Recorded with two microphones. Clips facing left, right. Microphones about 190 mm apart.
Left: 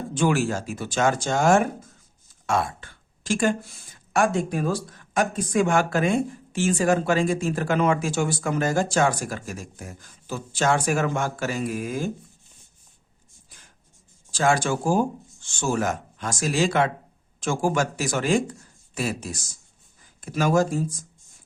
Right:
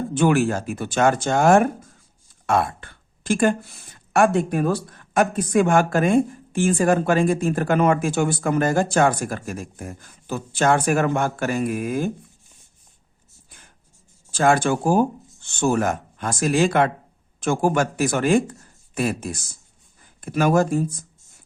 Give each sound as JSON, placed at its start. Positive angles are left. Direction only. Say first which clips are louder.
{"t": 0.1, "sound": "speech", "louder": "right 3 dB", "side_deg": -60}
{"t": 14.3, "sound": "speech", "louder": "right 4 dB", "side_deg": -55}